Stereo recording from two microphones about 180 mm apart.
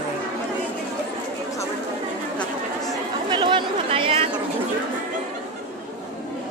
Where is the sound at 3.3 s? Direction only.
25° right (ahead or behind).